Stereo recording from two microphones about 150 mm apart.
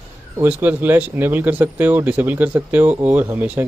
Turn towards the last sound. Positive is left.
turn(degrees=-10)  # may be behind; listen again after turning